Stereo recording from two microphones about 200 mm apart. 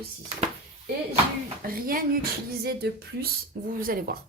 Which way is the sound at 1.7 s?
45° right (ahead or behind).